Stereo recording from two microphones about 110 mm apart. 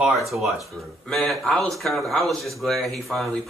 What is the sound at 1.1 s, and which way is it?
Speech, centre (ahead or behind).